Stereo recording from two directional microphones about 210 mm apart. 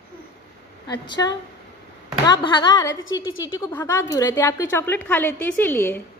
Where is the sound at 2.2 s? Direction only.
20° left (ahead or behind).